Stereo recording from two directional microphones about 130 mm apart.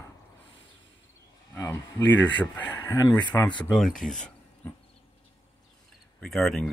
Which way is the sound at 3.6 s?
5° left (ahead or behind).